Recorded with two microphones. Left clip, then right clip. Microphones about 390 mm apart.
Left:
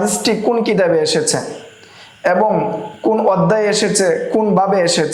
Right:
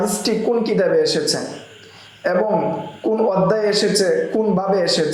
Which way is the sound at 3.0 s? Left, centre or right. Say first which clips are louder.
Left 4 dB; left.